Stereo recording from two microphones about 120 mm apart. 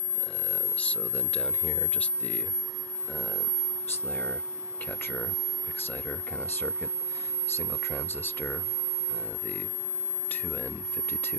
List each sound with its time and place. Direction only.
0.5 s speech: 10° left (ahead or behind)
4.1 s speech: 15° left (ahead or behind)
10.3 s speech: 15° left (ahead or behind)